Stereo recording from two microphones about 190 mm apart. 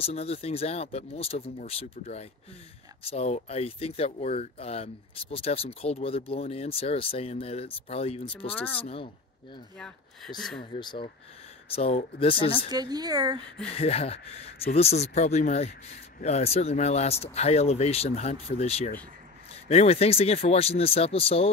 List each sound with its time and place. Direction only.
0.0 s speech: 35° left (ahead or behind)
8.5 s speech: 10° left (ahead or behind)
8.8 s speech: 30° left (ahead or behind)
9.8 s speech: 5° left (ahead or behind)
10.8 s speech: 25° left (ahead or behind)
12.6 s speech: 20° right (ahead or behind)
13.7 s speech: 30° left (ahead or behind)